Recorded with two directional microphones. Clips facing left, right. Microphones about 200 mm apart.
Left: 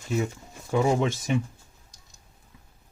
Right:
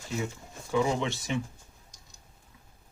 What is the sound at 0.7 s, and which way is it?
Speech, 45° left (ahead or behind).